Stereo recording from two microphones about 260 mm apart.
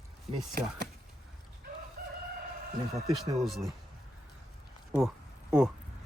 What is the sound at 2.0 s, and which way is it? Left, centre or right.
Crowing, right.